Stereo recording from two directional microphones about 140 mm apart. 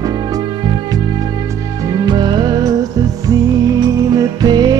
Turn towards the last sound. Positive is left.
turn(degrees=-30)  # may be behind; listen again after turning